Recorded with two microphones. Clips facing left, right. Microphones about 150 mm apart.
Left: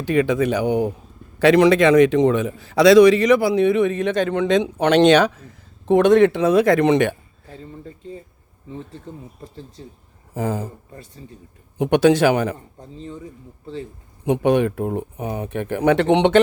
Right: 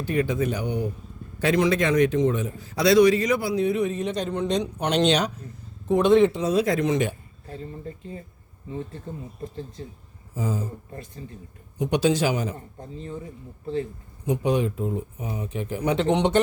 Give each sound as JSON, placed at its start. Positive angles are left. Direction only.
{"t": 0.0, "sound": "a man's voice", "side_deg": 90}
{"t": 1.4, "sound": "a man's voice", "side_deg": 80}
{"t": 5.8, "sound": "speech", "side_deg": 75}
{"t": 10.3, "sound": "speech", "side_deg": 60}
{"t": 11.8, "sound": "speech", "side_deg": 65}
{"t": 14.3, "sound": "speech", "side_deg": 60}